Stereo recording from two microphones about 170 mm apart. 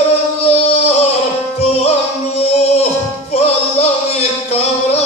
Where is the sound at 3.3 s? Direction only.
40° left (ahead or behind).